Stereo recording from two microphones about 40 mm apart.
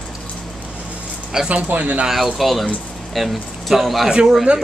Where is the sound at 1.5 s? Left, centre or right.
Right.